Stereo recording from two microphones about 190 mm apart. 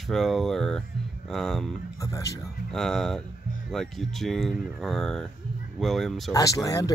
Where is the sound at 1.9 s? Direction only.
15° left (ahead or behind).